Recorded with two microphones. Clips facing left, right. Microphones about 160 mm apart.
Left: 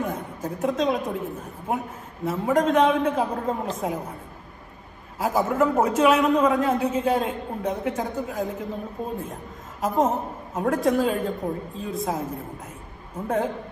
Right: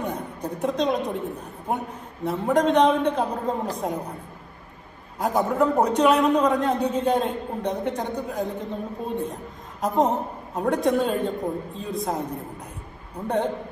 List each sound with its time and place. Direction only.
0.0 s a woman's voice: centre (ahead or behind)
5.2 s a man's voice: centre (ahead or behind)